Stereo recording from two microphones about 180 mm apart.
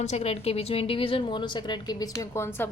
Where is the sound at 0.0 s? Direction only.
35° left (ahead or behind).